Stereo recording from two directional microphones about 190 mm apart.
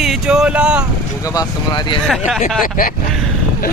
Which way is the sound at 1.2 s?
20° left (ahead or behind).